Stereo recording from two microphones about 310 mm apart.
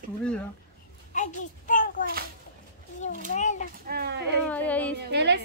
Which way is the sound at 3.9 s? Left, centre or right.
Right.